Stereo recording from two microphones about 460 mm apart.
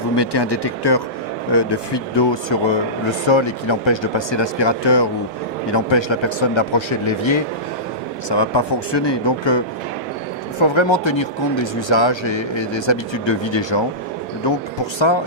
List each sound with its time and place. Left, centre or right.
0.2 s speech: left
8.3 s speech: left